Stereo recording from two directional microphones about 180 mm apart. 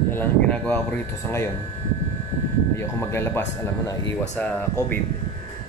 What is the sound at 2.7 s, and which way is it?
Speech, 15° left (ahead or behind).